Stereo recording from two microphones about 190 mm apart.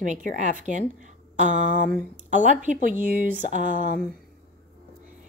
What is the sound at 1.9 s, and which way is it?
Speech, 40° right (ahead or behind).